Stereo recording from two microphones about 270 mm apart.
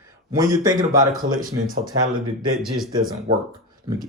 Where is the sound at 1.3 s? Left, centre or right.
Right.